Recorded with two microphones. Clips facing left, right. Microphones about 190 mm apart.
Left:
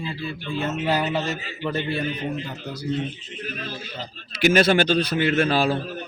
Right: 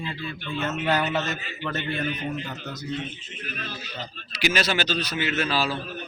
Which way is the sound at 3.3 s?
35° left (ahead or behind).